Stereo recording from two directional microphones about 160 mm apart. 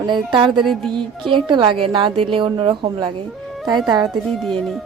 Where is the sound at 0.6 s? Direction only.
Centre (ahead or behind).